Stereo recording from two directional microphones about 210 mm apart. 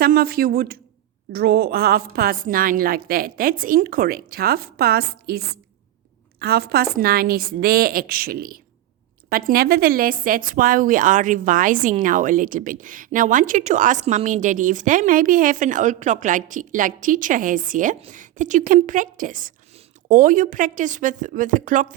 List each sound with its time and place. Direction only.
0.0 s a woman's voice: 45° right (ahead or behind)
6.4 s a woman's voice: 50° right (ahead or behind)